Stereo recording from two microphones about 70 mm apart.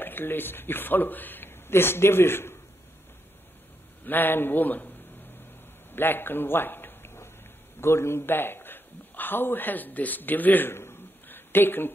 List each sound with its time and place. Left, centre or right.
0.0 s speech: left
4.0 s a man's voice: left
5.9 s a man's voice: left